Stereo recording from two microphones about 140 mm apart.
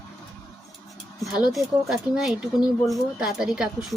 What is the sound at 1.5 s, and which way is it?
Speech, 5° right (ahead or behind).